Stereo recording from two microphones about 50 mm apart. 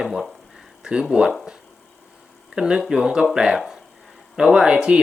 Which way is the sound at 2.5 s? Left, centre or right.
Centre.